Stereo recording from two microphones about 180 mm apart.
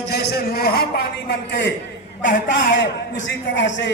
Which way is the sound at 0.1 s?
60° left (ahead or behind).